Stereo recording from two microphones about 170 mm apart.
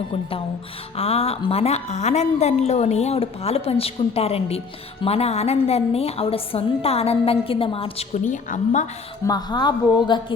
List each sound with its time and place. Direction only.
0.9 s a woman's voice: 35° left (ahead or behind)
9.2 s a woman's voice: 25° left (ahead or behind)